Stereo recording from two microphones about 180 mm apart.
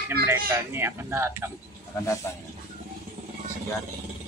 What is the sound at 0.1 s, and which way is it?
Speech, 10° right (ahead or behind).